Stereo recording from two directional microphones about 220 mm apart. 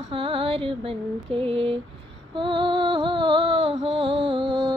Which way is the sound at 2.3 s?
20° right (ahead or behind).